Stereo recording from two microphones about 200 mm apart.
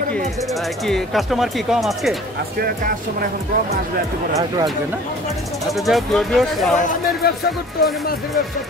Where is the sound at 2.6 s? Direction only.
45° right (ahead or behind).